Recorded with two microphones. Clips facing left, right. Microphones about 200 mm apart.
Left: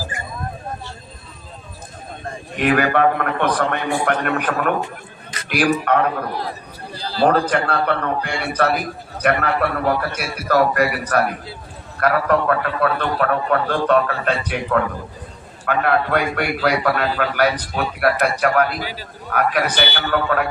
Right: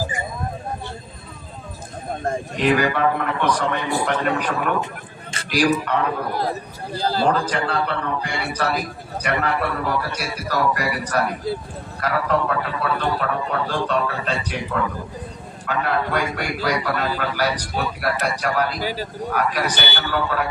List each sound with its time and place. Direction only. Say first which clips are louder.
2.6 s a man's voice: left 3 dB; 55° left (ahead or behind)
7.0 s a man's voice: left 2 dB; 45° right (ahead or behind)
7.3 s a man's voice: left 3 dB; 55° left (ahead or behind)
18.8 s a man's voice: right 4 dB; 45° right (ahead or behind)
19.3 s a man's voice: left 4 dB; 55° left (ahead or behind)